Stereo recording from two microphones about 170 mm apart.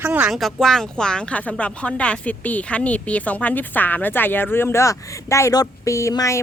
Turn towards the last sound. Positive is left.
turn(degrees=20)  # may be behind; listen again after turning